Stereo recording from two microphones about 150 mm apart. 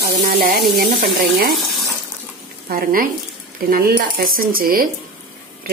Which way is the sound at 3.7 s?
85° right.